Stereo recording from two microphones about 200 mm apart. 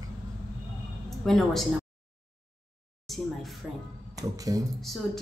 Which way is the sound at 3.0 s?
Centre (ahead or behind).